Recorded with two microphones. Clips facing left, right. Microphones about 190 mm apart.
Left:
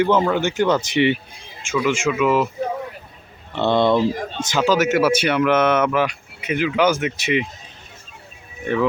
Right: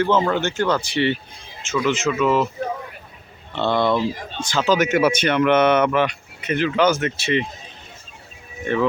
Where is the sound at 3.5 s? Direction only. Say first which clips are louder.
Left 3 dB; 20° left (ahead or behind).